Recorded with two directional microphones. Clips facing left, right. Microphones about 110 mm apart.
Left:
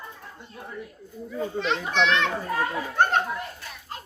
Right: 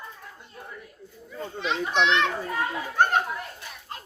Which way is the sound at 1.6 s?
15° right (ahead or behind).